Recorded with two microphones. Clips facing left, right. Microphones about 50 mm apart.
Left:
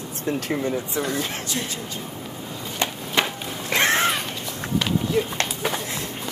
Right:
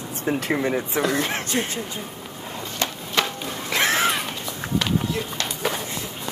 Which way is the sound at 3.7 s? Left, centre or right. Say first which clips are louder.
Left 1 dB; centre.